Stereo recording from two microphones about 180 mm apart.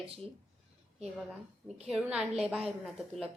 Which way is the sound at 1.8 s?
5° right (ahead or behind).